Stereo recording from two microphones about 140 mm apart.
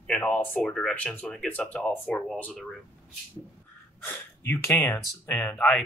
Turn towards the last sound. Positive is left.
turn(degrees=10)  # may be behind; listen again after turning